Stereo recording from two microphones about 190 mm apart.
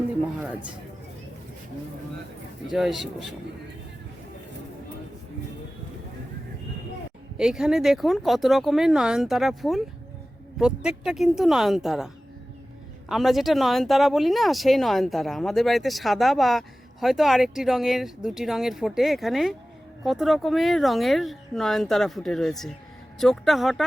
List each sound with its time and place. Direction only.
0.3 s speech: 5° right (ahead or behind)
2.6 s speech: centre (ahead or behind)
7.3 s speech: 5° right (ahead or behind)